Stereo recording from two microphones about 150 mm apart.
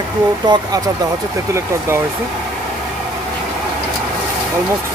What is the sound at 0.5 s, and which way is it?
Speech, 30° right (ahead or behind).